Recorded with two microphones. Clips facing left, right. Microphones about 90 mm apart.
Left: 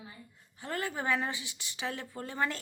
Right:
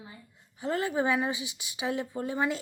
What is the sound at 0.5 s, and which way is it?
A woman's voice, 20° right (ahead or behind).